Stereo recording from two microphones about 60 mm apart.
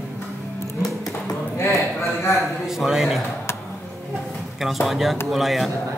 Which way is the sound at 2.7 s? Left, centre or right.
Centre.